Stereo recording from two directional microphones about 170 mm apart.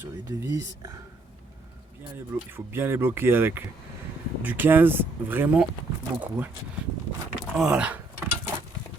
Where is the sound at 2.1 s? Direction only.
15° right (ahead or behind).